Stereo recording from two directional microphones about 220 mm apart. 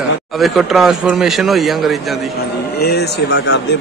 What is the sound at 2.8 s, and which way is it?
Speech, 50° left (ahead or behind).